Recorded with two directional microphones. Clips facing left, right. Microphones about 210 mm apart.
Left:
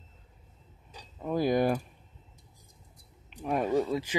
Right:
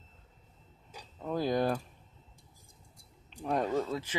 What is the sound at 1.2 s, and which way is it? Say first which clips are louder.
Speech: left 4 dB; 10° left (ahead or behind).